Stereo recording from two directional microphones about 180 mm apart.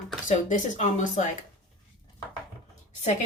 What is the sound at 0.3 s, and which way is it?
Speech, 45° left (ahead or behind).